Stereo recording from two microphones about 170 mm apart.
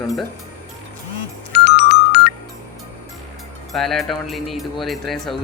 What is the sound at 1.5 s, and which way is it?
Music, 75° left (ahead or behind).